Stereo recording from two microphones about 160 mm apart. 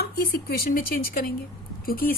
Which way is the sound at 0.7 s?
60° left (ahead or behind).